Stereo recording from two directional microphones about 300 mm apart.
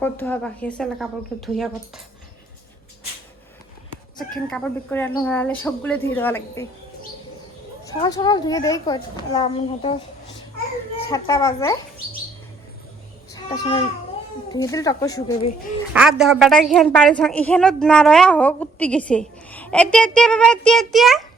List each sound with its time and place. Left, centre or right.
0.0 s a woman's voice: centre
4.2 s a woman's voice: centre
7.9 s a woman's voice: centre
13.3 s a woman's voice: centre
15.9 s a woman's voice: centre